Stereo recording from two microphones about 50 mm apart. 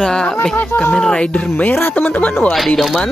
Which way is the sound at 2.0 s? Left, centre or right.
Left.